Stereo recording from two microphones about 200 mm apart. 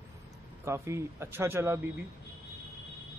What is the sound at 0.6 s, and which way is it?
Speech, 15° right (ahead or behind).